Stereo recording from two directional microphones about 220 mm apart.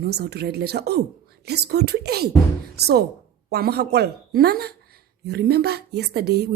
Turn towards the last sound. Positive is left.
turn(degrees=-45)  # may be behind; listen again after turning